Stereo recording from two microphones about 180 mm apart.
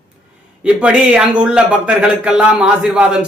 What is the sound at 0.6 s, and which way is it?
Speech, 5° right (ahead or behind).